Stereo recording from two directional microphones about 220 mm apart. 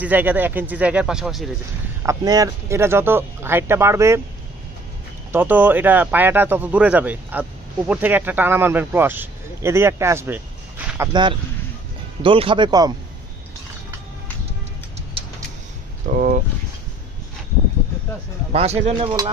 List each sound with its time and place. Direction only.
0.0 s speech: 10° right (ahead or behind)
2.0 s speech: 15° right (ahead or behind)
5.3 s speech: 10° right (ahead or behind)
12.2 s speech: 25° right (ahead or behind)
16.1 s speech: 35° right (ahead or behind)
18.5 s speech: 30° right (ahead or behind)